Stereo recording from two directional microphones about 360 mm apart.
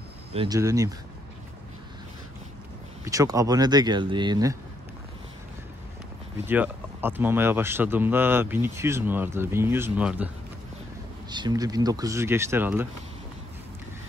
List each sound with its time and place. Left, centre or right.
0.3 s speech: centre
3.1 s speech: centre
6.4 s speech: centre